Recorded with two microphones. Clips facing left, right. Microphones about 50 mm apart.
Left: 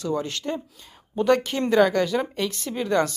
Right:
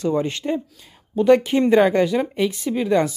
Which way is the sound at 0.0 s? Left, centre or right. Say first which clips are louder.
Right 5 dB; right.